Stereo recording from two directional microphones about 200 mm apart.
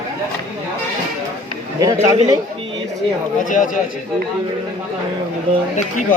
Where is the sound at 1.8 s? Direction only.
20° right (ahead or behind).